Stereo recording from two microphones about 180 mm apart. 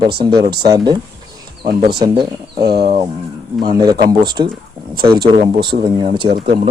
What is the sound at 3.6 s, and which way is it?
Speech, 20° right (ahead or behind).